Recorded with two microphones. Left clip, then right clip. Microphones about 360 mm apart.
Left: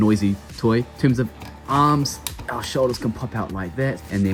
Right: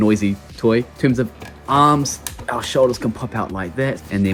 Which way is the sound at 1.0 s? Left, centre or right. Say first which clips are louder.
Right 3 dB; centre.